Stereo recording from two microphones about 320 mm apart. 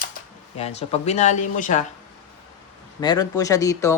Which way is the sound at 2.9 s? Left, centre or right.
Centre.